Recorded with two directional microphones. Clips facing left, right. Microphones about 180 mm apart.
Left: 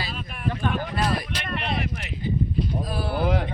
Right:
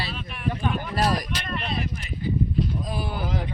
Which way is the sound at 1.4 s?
60° left (ahead or behind).